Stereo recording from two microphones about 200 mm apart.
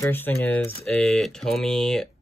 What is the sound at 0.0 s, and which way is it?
Speech, 10° left (ahead or behind).